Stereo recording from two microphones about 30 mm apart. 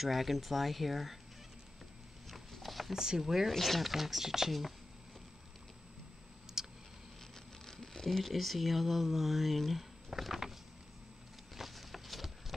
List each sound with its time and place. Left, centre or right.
0.0 s speech: centre
2.6 s a sound: centre
2.9 s speech: centre
3.5 s speech: centre
3.9 s speech: centre
6.6 s a sound: centre
7.6 s patter: centre
8.2 s speech: centre
11.5 s a sound: centre